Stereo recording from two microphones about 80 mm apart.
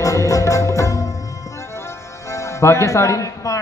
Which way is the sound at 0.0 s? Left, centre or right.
Left.